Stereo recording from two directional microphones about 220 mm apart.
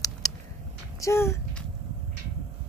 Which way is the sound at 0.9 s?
15° left (ahead or behind).